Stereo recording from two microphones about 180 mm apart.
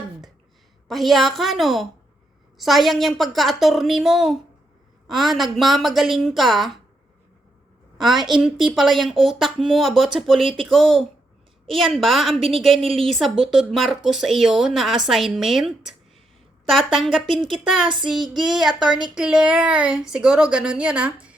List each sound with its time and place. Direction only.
0.9 s speech: centre (ahead or behind)
7.9 s speech: centre (ahead or behind)
12.4 s a woman's voice: 30° right (ahead or behind)
12.6 s speech: centre (ahead or behind)
17.2 s speech: 25° right (ahead or behind)
18.0 s speech: centre (ahead or behind)